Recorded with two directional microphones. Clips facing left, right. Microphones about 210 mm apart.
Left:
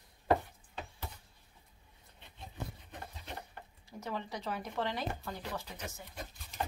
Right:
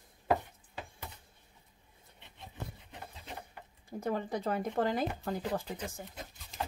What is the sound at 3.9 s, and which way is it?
Speech, 50° right (ahead or behind).